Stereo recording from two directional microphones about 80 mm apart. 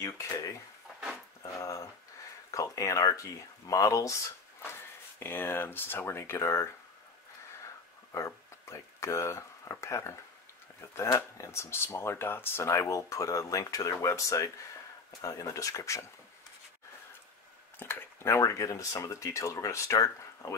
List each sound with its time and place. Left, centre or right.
1.4 s dog: left
2.5 s speech: left
5.2 s speech: left
8.1 s speech: left
11.1 s speech: left
17.7 s speech: left